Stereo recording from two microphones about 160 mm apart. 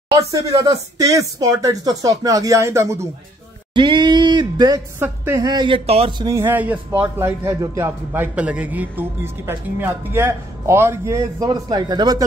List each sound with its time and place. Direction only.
0.3 s speech: 20° right (ahead or behind)
3.7 s speech: 30° right (ahead or behind)
4.9 s a man's voice: 15° right (ahead or behind)
5.4 s a man's voice: 25° right (ahead or behind)